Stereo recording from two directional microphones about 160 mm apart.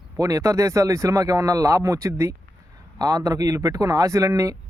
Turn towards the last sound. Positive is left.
turn(degrees=-20)  # may be behind; listen again after turning